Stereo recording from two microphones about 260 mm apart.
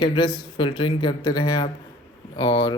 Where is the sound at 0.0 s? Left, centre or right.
Centre.